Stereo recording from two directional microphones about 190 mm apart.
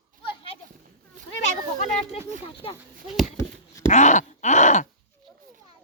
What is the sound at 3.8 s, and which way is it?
Groan, 40° left (ahead or behind).